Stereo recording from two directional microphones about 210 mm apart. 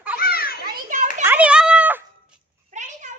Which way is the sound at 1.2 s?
10° right (ahead or behind).